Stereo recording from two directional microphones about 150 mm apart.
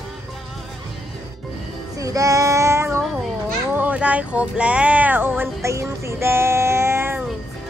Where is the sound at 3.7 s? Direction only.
10° right (ahead or behind).